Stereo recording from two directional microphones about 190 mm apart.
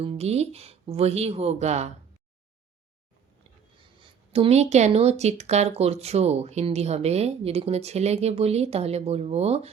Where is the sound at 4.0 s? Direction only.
30° right (ahead or behind).